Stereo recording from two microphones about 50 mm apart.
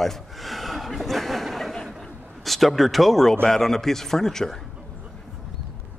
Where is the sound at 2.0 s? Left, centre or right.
Centre.